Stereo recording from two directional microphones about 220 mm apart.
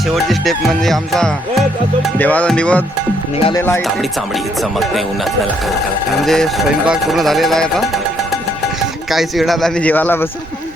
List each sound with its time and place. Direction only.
0.1 s speech: centre (ahead or behind)
2.1 s music: 5° left (ahead or behind)
3.3 s speech: 25° left (ahead or behind)
3.6 s music: 10° left (ahead or behind)
4.6 s speech: centre (ahead or behind)